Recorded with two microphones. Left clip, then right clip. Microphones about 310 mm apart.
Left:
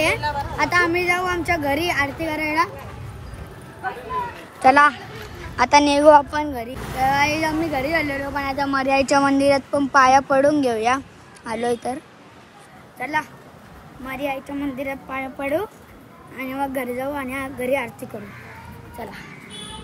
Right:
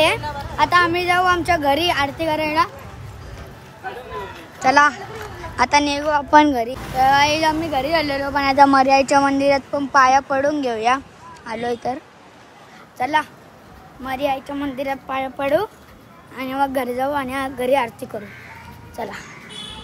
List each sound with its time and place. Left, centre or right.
0.7 s speech: centre
4.6 s speech: centre
6.4 s speech: right
7.0 s speech: centre
8.4 s speech: right
8.7 s speech: centre
13.0 s speech: centre